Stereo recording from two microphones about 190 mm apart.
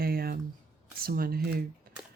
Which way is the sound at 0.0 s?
50° right (ahead or behind).